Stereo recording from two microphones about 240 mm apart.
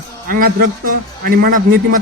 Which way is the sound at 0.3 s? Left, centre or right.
Right.